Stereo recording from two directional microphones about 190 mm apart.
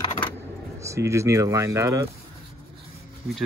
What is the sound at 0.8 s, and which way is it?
Speech, 15° right (ahead or behind).